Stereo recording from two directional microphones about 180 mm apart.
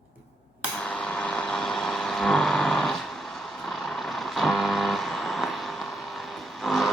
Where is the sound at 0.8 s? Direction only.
5° left (ahead or behind).